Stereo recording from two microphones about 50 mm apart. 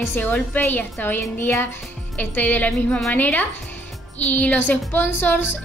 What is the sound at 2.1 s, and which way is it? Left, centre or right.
Speech, left.